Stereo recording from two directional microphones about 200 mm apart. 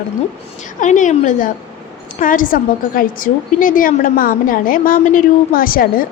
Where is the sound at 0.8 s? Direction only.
40° left (ahead or behind).